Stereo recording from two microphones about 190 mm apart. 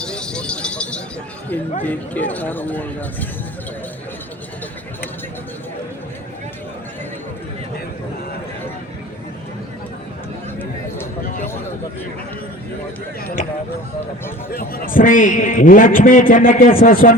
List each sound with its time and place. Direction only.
0.0 s a sound: 5° left (ahead or behind)
1.8 s speech: 10° left (ahead or behind)
14.5 s a man's voice: 50° left (ahead or behind)